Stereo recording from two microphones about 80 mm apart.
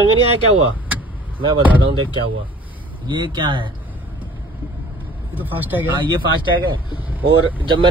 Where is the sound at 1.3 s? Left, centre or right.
Right.